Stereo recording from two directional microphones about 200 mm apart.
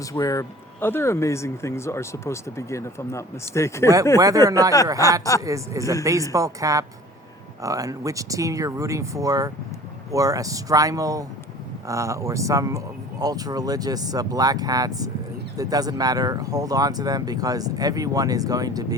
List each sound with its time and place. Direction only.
0.0 s speech: 15° left (ahead or behind)
4.2 s speech: 15° right (ahead or behind)